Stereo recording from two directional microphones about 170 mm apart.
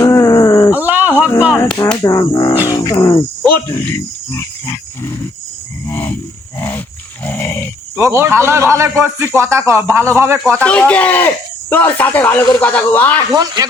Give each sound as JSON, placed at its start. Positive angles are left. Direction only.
{"t": 0.0, "sound": "a sound", "side_deg": 20}
{"t": 0.7, "sound": "a sound", "side_deg": -10}
{"t": 1.5, "sound": "speech", "side_deg": 10}
{"t": 2.6, "sound": "cricket", "side_deg": 20}
{"t": 3.8, "sound": "speech", "side_deg": 15}
{"t": 5.9, "sound": "cricket", "side_deg": 10}
{"t": 6.6, "sound": "wild animals", "side_deg": 10}
{"t": 7.3, "sound": "dog", "side_deg": 15}
{"t": 7.9, "sound": "a man's voice", "side_deg": -15}
{"t": 10.6, "sound": "speech", "side_deg": 5}
{"t": 13.3, "sound": "speech", "side_deg": -25}